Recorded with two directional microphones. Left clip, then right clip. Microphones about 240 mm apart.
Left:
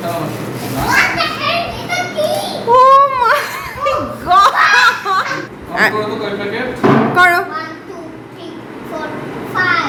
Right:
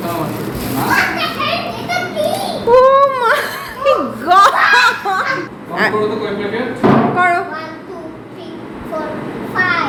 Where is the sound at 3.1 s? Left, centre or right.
Centre.